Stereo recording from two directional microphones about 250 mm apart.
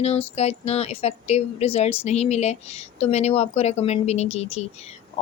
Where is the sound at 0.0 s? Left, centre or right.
Left.